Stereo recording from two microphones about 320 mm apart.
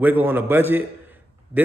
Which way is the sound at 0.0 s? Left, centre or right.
Centre.